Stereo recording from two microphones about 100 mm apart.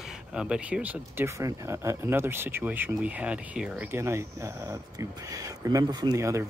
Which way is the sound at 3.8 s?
25° right (ahead or behind).